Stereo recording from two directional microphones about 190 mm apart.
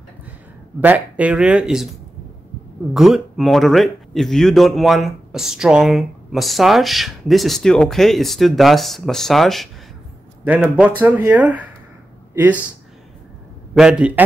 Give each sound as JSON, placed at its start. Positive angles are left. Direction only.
{"t": 0.7, "sound": "speech", "side_deg": -10}
{"t": 2.9, "sound": "a man's voice", "side_deg": 0}
{"t": 13.7, "sound": "speech", "side_deg": -5}